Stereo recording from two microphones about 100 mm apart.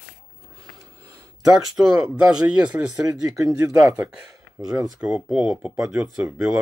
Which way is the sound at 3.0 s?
35° right (ahead or behind).